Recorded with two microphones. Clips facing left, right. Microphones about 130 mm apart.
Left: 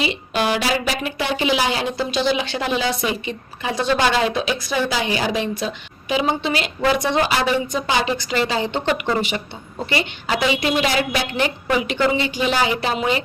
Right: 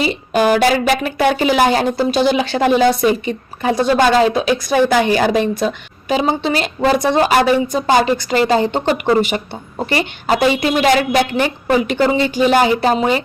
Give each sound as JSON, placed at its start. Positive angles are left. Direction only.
{"t": 0.0, "sound": "a woman's voice", "side_deg": -45}